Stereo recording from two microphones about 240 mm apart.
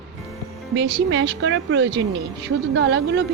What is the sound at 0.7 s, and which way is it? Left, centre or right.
Speech, right.